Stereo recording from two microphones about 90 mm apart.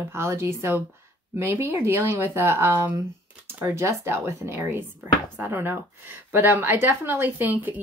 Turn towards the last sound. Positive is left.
turn(degrees=-20)  # may be behind; listen again after turning